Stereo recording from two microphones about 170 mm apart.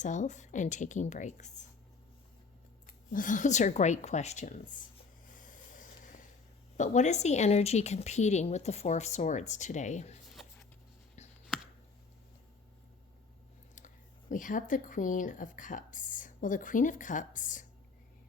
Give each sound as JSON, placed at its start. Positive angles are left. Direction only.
{"t": 0.0, "sound": "a woman's voice", "side_deg": 45}
{"t": 2.8, "sound": "a woman's voice", "side_deg": 55}
{"t": 5.3, "sound": "a sound", "side_deg": 50}
{"t": 6.7, "sound": "a woman's voice", "side_deg": 45}
{"t": 11.4, "sound": "a sound", "side_deg": -5}
{"t": 13.7, "sound": "speech", "side_deg": 50}